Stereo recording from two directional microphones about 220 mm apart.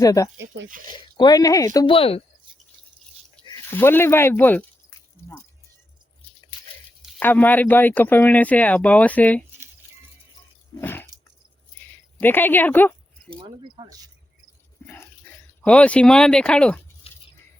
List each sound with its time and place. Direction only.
0.0 s speech: 15° left (ahead or behind)
0.3 s speech: 55° right (ahead or behind)
0.9 s speech: 20° left (ahead or behind)
3.8 s speech: 10° left (ahead or behind)
7.2 s speech: 10° left (ahead or behind)
10.8 s dog: 10° left (ahead or behind)
11.8 s a sound: 10° left (ahead or behind)
13.4 s speech: 20° right (ahead or behind)
14.8 s speech: 10° left (ahead or behind)